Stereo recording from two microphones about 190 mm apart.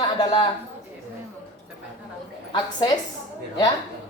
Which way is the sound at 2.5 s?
25° left (ahead or behind).